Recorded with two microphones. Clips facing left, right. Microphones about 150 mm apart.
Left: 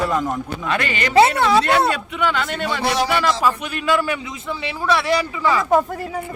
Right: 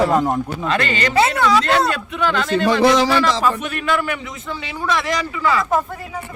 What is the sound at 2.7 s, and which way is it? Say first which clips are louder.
Speech: right 7 dB; 90° right.